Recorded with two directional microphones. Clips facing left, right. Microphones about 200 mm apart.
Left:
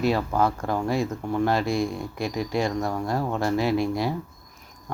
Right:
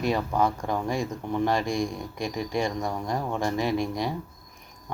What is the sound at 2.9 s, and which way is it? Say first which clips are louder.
Speech: left 3 dB; 15° right (ahead or behind).